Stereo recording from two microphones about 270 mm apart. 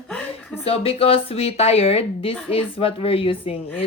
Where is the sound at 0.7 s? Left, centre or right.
Left.